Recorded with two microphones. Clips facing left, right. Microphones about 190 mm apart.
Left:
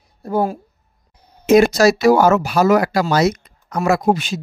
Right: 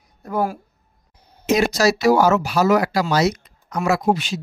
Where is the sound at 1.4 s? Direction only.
55° left (ahead or behind).